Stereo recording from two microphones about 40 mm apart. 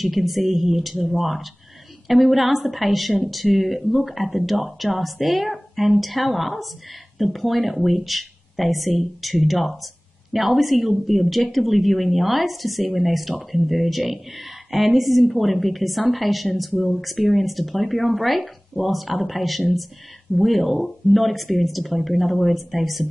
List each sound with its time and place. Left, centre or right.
0.0 s a woman's voice: centre